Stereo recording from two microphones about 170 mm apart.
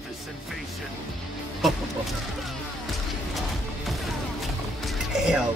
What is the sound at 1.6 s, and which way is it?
Music, centre (ahead or behind).